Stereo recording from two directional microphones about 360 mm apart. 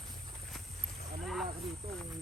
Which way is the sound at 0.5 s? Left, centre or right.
Centre.